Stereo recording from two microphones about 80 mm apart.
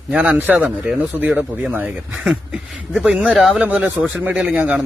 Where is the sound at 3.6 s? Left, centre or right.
Centre.